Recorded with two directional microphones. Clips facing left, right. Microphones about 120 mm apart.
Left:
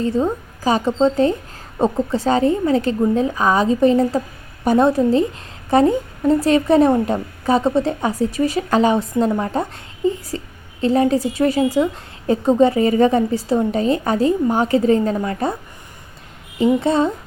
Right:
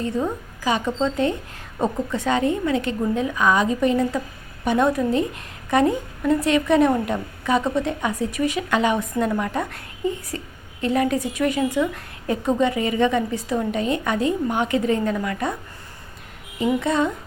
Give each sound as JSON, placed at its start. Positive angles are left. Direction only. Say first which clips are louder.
{"t": 0.0, "sound": "a woman's voice", "louder": "left 5 dB", "side_deg": 30}
{"t": 16.8, "sound": "a woman's voice", "louder": "left 4 dB", "side_deg": 30}